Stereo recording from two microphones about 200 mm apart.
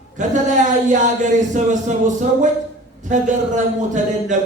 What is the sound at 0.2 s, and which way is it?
A man's voice, 40° right (ahead or behind).